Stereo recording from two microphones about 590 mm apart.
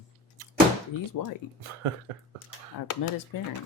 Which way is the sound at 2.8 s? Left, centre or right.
Left.